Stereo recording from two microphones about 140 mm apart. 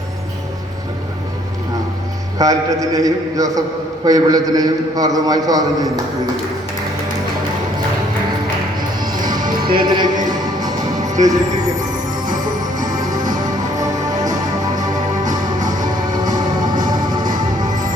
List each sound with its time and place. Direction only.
2.4 s a man's voice: 25° right (ahead or behind)
9.7 s music: 30° right (ahead or behind)
11.2 s a man's voice: 25° right (ahead or behind)
12.8 s music: 25° right (ahead or behind)